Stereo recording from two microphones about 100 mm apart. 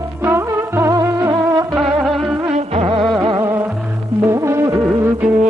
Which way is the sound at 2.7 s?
80° right.